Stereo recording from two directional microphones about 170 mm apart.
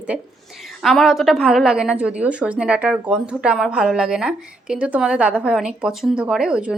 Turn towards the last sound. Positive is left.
turn(degrees=-5)  # may be behind; listen again after turning